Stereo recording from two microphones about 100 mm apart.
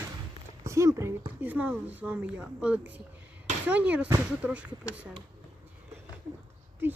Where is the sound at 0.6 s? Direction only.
30° right (ahead or behind).